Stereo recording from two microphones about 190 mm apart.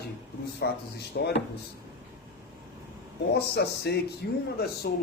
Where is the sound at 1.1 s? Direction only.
60° left (ahead or behind).